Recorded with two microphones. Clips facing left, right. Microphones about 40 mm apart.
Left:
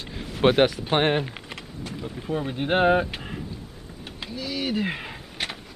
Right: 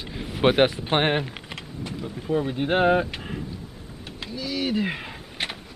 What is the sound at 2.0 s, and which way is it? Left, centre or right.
Speech, centre.